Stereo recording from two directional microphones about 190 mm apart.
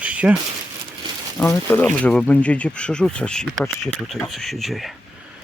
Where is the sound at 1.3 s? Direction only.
10° left (ahead or behind).